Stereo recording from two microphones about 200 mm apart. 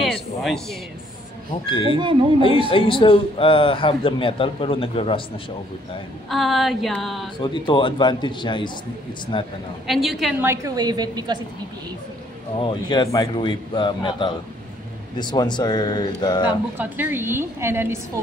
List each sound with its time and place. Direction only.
0.0 s a sound: centre (ahead or behind)
1.9 s a woman's voice: 25° right (ahead or behind)
2.7 s a man's voice: 25° left (ahead or behind)
6.2 s a sound: centre (ahead or behind)
7.3 s a man's voice: 25° left (ahead or behind)
9.8 s a sound: centre (ahead or behind)
10.4 s a woman's voice: 15° right (ahead or behind)
12.5 s a man's voice: 25° left (ahead or behind)
16.7 s a woman's voice: 10° right (ahead or behind)